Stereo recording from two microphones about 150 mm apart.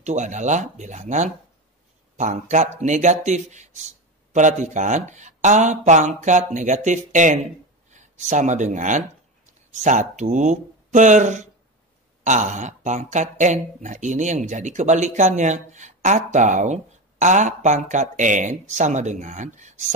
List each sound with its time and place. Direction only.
0.0 s speech: 55° right (ahead or behind)